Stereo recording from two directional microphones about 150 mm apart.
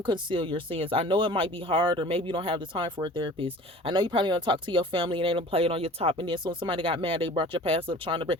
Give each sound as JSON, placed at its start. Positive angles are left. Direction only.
{"t": 0.0, "sound": "speech", "side_deg": -35}